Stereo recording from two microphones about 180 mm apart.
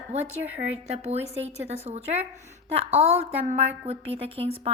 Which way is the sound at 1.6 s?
35° right (ahead or behind).